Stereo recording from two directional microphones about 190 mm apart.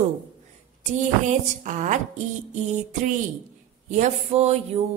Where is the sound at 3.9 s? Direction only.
35° right (ahead or behind).